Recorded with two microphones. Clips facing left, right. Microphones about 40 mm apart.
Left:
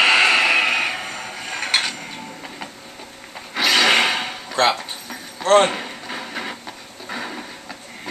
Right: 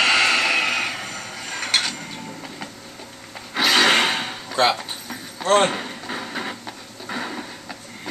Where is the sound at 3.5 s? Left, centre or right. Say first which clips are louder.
Even; centre.